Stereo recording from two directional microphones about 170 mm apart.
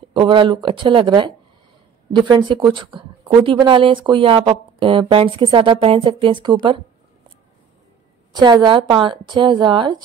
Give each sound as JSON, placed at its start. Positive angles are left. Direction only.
{"t": 0.1, "sound": "a woman's voice", "side_deg": -30}
{"t": 8.3, "sound": "a woman's voice", "side_deg": -25}